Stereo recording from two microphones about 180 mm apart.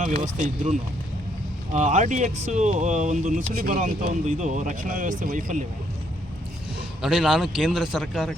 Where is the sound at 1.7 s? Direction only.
40° right (ahead or behind).